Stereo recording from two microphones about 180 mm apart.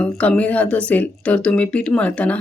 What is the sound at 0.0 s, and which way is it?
Speech, 5° left (ahead or behind).